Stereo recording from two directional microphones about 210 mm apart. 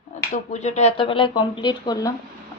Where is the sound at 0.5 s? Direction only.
35° left (ahead or behind).